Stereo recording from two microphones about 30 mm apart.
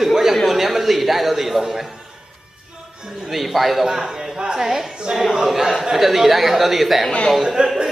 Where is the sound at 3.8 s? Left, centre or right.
Centre.